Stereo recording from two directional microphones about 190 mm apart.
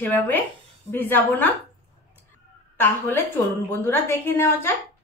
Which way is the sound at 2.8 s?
10° left (ahead or behind).